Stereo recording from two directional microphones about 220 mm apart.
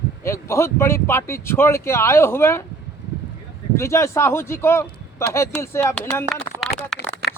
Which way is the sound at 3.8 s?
15° left (ahead or behind).